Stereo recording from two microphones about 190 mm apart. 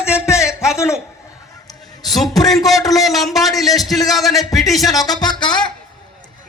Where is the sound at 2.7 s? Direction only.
20° left (ahead or behind).